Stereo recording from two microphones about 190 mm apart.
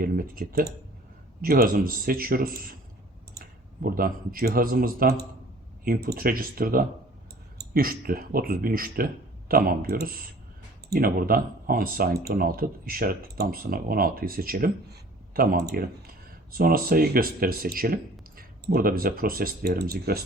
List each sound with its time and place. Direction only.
0.0 s speech: 50° right (ahead or behind)
3.8 s speech: 50° right (ahead or behind)